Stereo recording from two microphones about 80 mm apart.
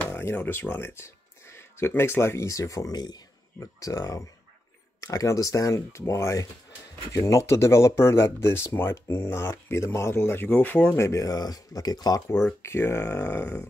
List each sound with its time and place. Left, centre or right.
0.1 s a sound: left
0.4 s speech: left
3.5 s speech: left
11.0 s speech: left
12.6 s speech: left